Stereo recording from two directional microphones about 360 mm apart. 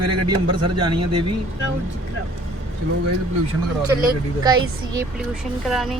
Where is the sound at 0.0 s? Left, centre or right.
Right.